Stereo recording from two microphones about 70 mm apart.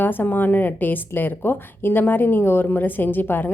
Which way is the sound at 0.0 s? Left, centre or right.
Left.